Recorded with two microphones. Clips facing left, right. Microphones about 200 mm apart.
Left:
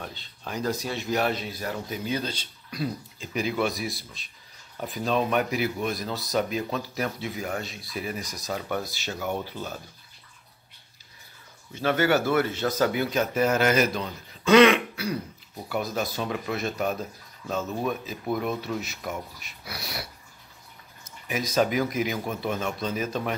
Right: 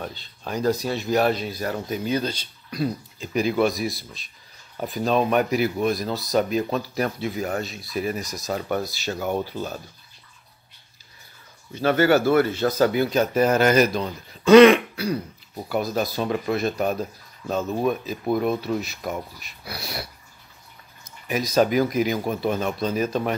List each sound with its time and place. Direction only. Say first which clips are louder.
0.4 s speech: right 6 dB; 35° right (ahead or behind)
5.0 s speech: right 4 dB; 45° right (ahead or behind)
11.8 s speech: right 5 dB; 40° right (ahead or behind)
21.3 s speech: right 4 dB; 35° right (ahead or behind)